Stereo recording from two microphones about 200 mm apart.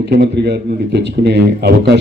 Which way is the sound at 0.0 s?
55° right (ahead or behind).